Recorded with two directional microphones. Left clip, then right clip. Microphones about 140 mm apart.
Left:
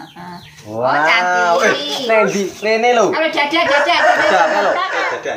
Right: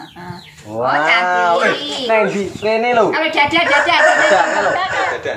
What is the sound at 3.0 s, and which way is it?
Speech, 10° left (ahead or behind).